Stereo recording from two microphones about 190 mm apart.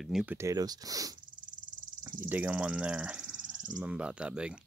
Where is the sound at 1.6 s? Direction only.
45° right (ahead or behind).